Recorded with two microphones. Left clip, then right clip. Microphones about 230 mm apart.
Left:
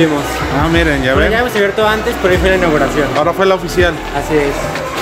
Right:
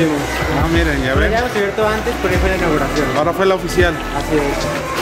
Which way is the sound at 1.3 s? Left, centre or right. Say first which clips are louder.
Left 4 dB; left.